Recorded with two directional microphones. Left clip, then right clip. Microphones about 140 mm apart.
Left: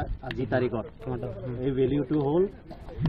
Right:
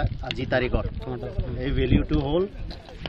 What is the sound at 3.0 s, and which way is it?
Speech, 15° left (ahead or behind).